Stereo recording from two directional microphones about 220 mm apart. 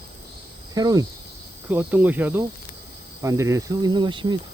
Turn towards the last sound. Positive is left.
turn(degrees=-20)  # may be behind; listen again after turning